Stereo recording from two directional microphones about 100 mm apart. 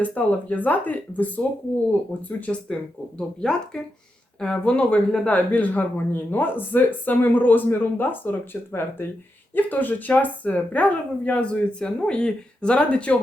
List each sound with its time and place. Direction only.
0.0 s speech: 15° left (ahead or behind)